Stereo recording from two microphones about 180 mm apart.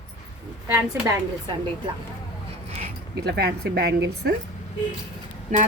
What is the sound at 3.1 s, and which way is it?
Speech, 65° right (ahead or behind).